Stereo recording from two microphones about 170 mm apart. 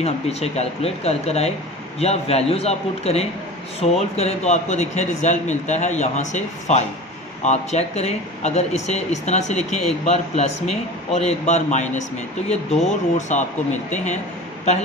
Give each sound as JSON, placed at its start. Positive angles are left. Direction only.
{"t": 0.0, "sound": "speech", "side_deg": 40}
{"t": 12.4, "sound": "speech", "side_deg": 0}
{"t": 13.3, "sound": "speech", "side_deg": 45}